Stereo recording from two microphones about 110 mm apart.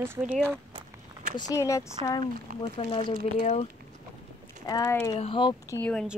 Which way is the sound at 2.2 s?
55° left (ahead or behind).